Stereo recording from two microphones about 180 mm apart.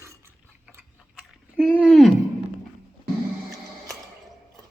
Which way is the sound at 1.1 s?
5° left (ahead or behind).